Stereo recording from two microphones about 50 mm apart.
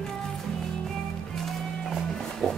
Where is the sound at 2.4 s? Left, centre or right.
Centre.